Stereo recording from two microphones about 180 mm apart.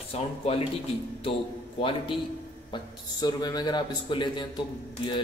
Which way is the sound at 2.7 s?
25° left (ahead or behind).